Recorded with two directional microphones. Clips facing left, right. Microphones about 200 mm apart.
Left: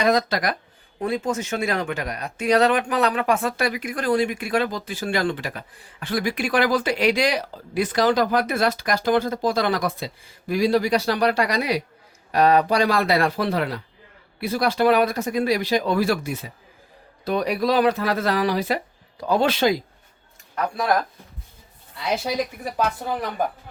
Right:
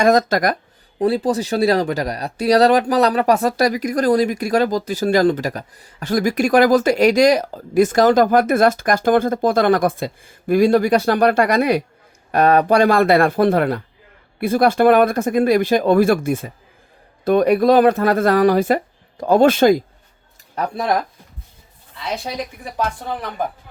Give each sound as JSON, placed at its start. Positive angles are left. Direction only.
{"t": 0.0, "sound": "speech", "side_deg": -45}
{"t": 0.9, "sound": "speech", "side_deg": -35}
{"t": 20.6, "sound": "speech", "side_deg": -25}
{"t": 22.8, "sound": "speech", "side_deg": 5}